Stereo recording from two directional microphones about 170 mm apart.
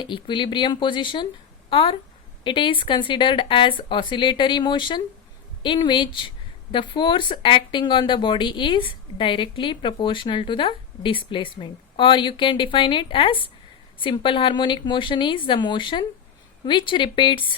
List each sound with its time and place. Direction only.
0.0 s speech: 30° left (ahead or behind)